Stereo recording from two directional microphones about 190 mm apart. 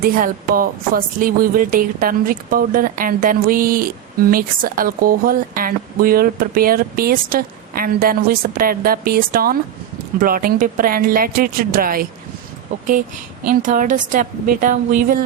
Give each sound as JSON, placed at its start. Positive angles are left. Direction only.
{"t": 0.0, "sound": "speech", "side_deg": -45}
{"t": 13.5, "sound": "speech", "side_deg": -45}